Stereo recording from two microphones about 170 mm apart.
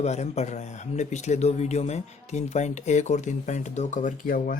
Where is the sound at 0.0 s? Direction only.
40° left (ahead or behind).